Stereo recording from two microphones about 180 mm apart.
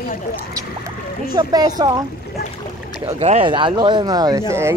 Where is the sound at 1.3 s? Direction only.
20° right (ahead or behind).